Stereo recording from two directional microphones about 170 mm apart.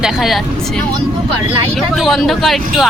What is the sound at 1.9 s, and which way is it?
Speech, centre (ahead or behind).